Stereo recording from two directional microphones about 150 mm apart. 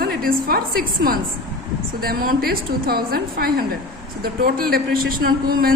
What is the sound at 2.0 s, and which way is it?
A woman's voice, 90° right.